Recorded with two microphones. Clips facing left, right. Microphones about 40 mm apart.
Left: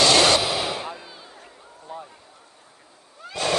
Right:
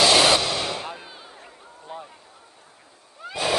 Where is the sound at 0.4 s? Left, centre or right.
Centre.